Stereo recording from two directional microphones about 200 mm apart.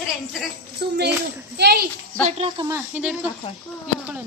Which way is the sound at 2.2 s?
30° right (ahead or behind).